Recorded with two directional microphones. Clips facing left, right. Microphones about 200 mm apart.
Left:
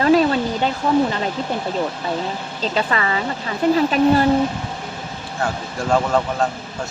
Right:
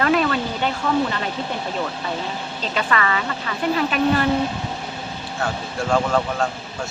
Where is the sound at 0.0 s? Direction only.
30° left (ahead or behind).